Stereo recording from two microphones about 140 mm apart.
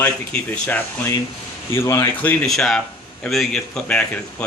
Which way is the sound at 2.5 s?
5° left (ahead or behind).